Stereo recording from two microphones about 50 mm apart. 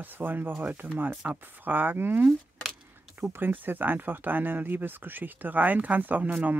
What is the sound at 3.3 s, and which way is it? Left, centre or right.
Speech, right.